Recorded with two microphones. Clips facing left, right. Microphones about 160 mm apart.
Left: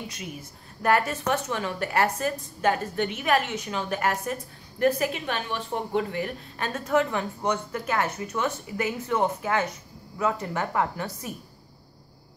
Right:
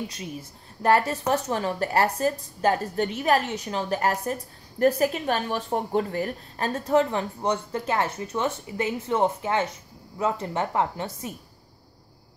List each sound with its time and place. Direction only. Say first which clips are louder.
0.1 s a woman's voice: right 2 dB; 30° right (ahead or behind)